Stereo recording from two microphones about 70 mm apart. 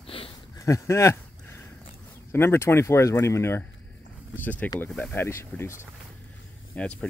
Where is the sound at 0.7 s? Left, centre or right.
Left.